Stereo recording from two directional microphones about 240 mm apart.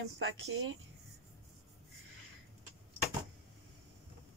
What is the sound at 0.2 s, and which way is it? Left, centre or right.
Speech, right.